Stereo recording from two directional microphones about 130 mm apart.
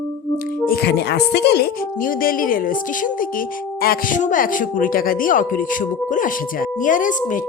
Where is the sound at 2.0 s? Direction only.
90° left.